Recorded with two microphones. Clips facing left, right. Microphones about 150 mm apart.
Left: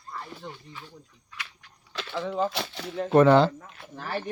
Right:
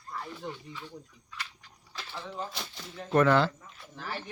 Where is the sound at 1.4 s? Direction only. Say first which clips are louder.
Left 1 dB; 65° left (ahead or behind).